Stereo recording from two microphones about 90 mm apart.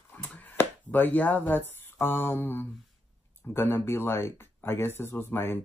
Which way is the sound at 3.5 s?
25° left (ahead or behind).